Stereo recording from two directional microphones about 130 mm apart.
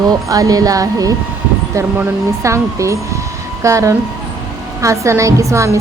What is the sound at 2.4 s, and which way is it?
A woman's voice, 25° right (ahead or behind).